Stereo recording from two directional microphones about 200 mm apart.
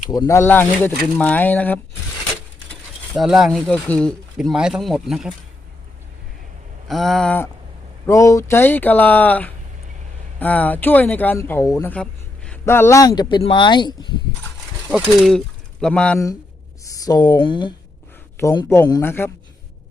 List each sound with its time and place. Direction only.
0.1 s speech: 15° left (ahead or behind)
3.2 s speech: centre (ahead or behind)
6.8 s speech: centre (ahead or behind); by 14.1 s 20° left (ahead or behind)
14.8 s speech: centre (ahead or behind)
16.9 s speech: 20° left (ahead or behind)
18.3 s speech: 15° left (ahead or behind)